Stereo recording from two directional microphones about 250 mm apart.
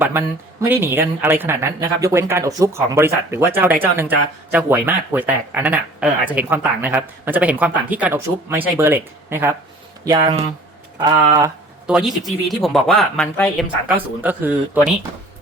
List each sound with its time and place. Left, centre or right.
0.0 s speech: centre
11.9 s speech: centre